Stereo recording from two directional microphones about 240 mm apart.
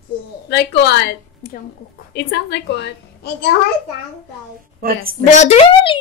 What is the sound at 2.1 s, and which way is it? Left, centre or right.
A woman's voice, left.